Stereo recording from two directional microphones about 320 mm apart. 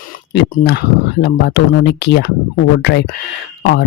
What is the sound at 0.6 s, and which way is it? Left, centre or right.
Speech, left.